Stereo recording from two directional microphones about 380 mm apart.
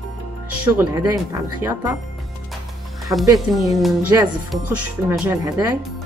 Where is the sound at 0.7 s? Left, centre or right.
Centre.